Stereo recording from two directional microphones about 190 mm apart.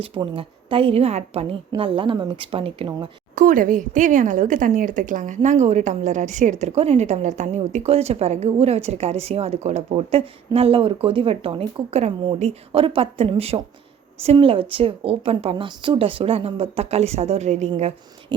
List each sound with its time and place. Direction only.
0.0 s a woman's voice: 30° right (ahead or behind)
3.3 s a woman's voice: 45° right (ahead or behind)
18.3 s speech: 25° right (ahead or behind)